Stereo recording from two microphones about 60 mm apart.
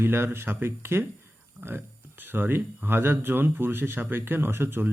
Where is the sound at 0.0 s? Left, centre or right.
Right.